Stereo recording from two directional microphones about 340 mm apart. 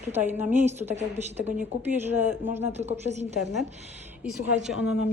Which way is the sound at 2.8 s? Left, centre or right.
Centre.